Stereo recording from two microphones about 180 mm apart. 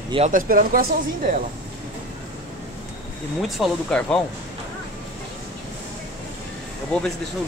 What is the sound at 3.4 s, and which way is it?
Speech, 5° left (ahead or behind).